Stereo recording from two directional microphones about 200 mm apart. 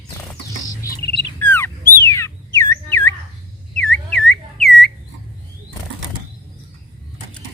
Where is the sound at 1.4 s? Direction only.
10° left (ahead or behind).